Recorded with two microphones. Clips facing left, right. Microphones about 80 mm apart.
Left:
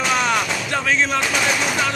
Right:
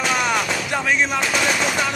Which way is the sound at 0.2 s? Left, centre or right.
Centre.